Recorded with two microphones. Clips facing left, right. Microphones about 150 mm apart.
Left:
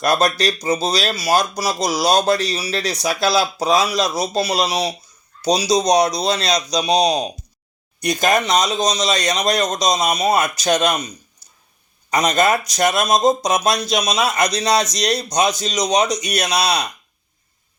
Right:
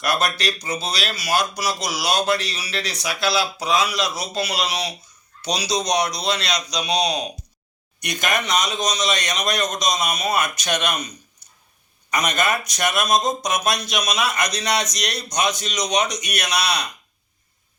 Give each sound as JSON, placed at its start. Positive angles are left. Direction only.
{"t": 0.0, "sound": "speech", "side_deg": 40}
{"t": 11.4, "sound": "a sound", "side_deg": 35}
{"t": 12.1, "sound": "speech", "side_deg": 35}